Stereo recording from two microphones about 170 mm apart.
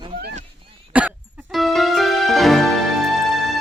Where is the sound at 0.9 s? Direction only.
10° right (ahead or behind).